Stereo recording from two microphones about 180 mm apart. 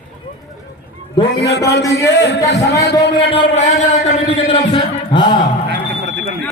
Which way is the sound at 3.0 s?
30° left (ahead or behind).